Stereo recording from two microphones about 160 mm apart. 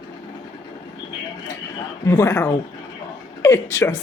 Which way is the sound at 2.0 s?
20° left (ahead or behind).